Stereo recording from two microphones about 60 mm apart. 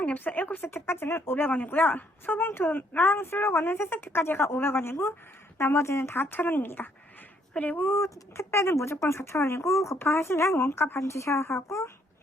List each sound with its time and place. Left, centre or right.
0.0 s speech: left
6.2 s speech: left
7.9 s speech: left
10.1 s speech: left
11.0 s speech: left